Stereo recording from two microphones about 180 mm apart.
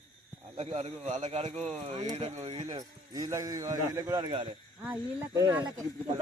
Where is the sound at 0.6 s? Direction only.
40° right (ahead or behind).